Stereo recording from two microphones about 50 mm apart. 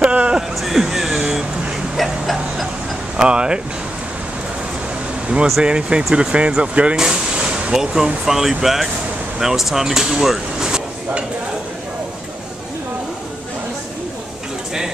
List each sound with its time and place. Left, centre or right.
0.0 s music: right
0.6 s a sound: centre
3.2 s speech: centre
5.6 s speech: centre
7.0 s a sound: centre
7.7 s speech: centre